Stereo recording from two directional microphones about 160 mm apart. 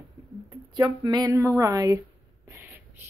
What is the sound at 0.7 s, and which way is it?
Speech, 25° right (ahead or behind).